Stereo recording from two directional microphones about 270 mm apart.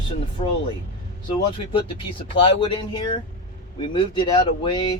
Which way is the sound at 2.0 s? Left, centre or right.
Centre.